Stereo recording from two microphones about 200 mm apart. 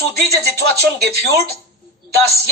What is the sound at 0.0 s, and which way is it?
A man's voice, 55° right (ahead or behind).